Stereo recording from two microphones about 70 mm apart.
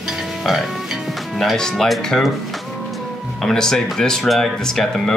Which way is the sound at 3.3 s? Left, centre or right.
Centre.